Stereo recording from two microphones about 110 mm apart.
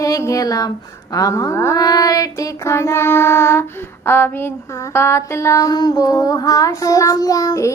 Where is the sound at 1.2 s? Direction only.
30° left (ahead or behind).